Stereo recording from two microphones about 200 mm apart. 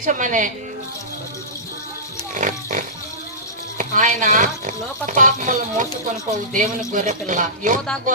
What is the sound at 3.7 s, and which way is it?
Speech, 40° right (ahead or behind).